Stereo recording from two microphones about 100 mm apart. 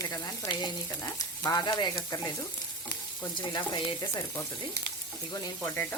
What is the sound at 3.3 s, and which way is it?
Frying, 50° left (ahead or behind).